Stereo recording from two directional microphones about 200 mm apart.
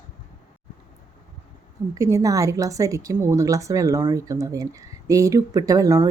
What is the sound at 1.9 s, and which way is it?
A woman's voice, 15° right (ahead or behind).